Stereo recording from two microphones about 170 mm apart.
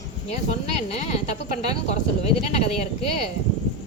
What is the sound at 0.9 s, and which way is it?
Speech, 40° left (ahead or behind).